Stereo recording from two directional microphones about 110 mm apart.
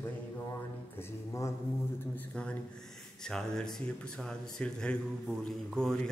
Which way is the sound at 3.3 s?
5° left (ahead or behind).